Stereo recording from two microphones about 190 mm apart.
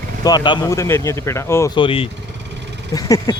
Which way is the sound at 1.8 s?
30° left (ahead or behind).